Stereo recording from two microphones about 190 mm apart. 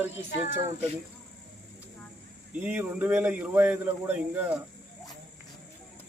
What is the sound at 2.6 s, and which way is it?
Speech, 10° right (ahead or behind).